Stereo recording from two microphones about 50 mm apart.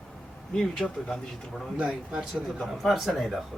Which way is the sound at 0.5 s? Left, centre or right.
Centre.